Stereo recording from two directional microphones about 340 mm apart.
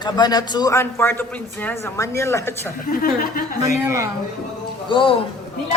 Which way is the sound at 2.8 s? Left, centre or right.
Left.